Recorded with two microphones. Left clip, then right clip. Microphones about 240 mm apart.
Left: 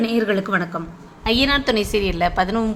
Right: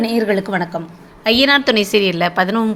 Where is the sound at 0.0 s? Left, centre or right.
Centre.